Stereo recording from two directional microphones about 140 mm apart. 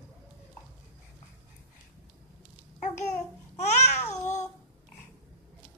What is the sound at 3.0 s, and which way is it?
Babbling, 55° left (ahead or behind).